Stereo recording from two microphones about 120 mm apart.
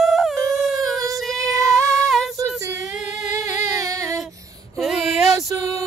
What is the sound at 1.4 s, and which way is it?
Music, 30° right (ahead or behind).